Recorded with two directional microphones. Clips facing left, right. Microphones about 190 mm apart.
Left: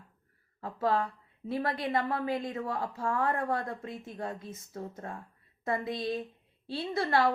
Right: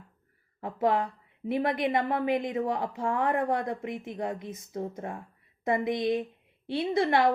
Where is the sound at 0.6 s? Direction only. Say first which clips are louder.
Right 3 dB; 20° right (ahead or behind).